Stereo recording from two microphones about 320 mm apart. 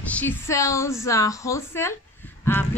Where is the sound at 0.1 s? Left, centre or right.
Centre.